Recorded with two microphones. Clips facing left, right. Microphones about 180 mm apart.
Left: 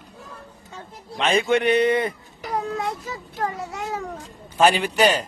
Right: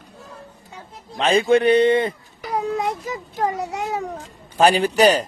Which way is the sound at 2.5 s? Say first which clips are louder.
Right 3 dB; 15° right (ahead or behind).